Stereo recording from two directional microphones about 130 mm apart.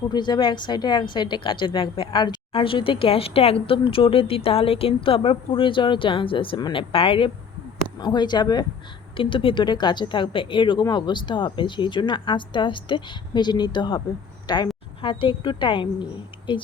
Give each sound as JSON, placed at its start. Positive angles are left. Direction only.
{"t": 0.1, "sound": "a woman's voice", "side_deg": 35}